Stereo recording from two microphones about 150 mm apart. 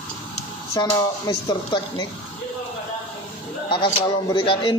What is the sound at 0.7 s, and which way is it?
Speech, 25° left (ahead or behind).